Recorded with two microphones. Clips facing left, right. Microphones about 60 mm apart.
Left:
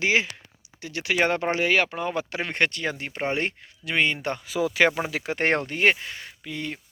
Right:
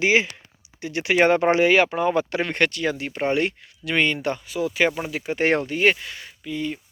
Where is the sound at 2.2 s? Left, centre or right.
Centre.